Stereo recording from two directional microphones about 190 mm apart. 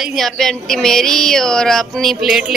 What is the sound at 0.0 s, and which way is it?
Speech, centre (ahead or behind).